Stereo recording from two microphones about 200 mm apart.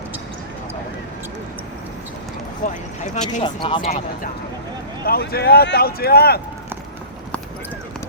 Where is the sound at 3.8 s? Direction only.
45° left (ahead or behind).